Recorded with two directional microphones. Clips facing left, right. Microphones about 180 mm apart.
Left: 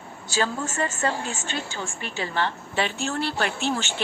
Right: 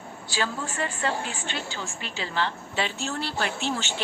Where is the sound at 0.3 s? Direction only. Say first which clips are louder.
Left 4 dB; 45° left (ahead or behind).